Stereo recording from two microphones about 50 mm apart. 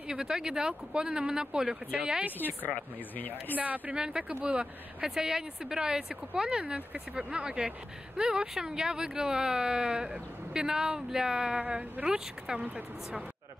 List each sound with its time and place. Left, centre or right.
0.1 s speech: centre
2.3 s speech: left
3.5 s speech: right
3.9 s speech: centre